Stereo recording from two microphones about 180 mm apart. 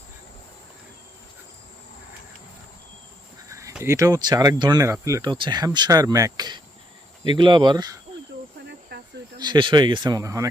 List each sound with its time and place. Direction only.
3.5 s speech: 15° right (ahead or behind)
8.9 s cricket: 65° right (ahead or behind)
9.4 s speech: 25° right (ahead or behind)